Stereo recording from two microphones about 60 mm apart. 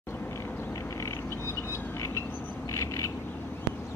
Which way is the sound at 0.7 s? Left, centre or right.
Left.